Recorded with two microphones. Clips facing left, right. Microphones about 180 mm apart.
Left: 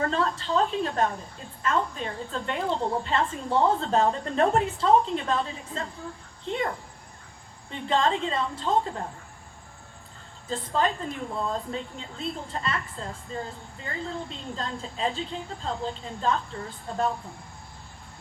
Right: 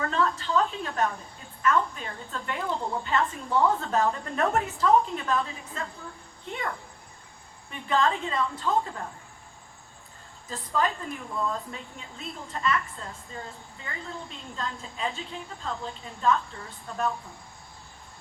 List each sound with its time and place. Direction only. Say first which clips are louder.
0.0 s a woman's voice: left 1 dB; 30° left (ahead or behind)
10.5 s a woman's voice: left 2 dB; 30° left (ahead or behind)